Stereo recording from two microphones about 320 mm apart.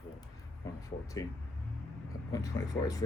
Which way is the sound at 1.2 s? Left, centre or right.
Centre.